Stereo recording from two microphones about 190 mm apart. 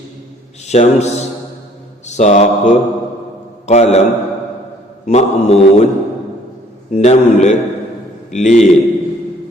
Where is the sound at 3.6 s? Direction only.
35° left (ahead or behind).